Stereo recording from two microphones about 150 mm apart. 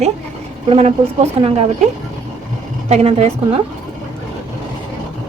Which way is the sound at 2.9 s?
45° right (ahead or behind).